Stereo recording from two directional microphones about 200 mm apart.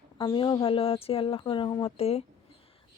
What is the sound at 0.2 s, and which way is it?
Speech, 20° left (ahead or behind).